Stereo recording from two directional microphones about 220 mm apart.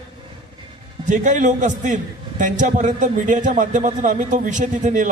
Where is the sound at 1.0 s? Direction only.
35° right (ahead or behind).